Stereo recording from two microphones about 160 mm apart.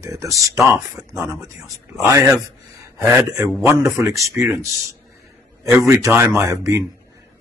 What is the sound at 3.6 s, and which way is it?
Speech, 20° right (ahead or behind).